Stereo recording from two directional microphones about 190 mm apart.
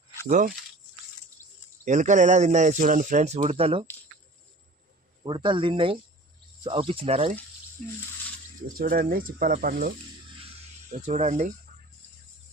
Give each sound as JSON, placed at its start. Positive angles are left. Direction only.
{"t": 0.3, "sound": "speech", "side_deg": -45}
{"t": 1.8, "sound": "speech", "side_deg": -40}
{"t": 5.2, "sound": "speech", "side_deg": -25}
{"t": 8.8, "sound": "speech", "side_deg": -50}